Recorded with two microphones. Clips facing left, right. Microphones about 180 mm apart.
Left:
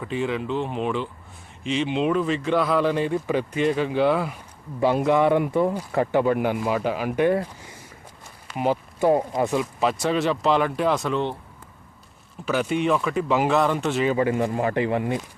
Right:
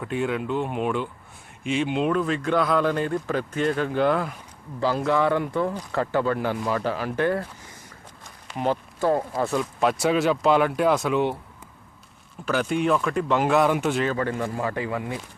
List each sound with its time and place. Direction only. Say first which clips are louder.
0.0 s speech: even; centre (ahead or behind)
4.8 s speech: left 3 dB; 25° left (ahead or behind)
9.6 s speech: even; centre (ahead or behind)
12.5 s speech: even; centre (ahead or behind)
14.1 s speech: left 4 dB; 10° left (ahead or behind)